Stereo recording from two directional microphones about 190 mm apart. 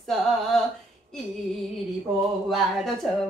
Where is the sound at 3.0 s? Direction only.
Centre (ahead or behind).